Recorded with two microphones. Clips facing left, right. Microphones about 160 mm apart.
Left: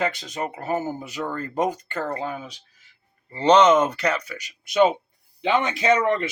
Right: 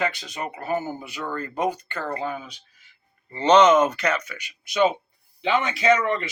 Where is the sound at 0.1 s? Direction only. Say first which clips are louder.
Left 3 dB; 45° left (ahead or behind).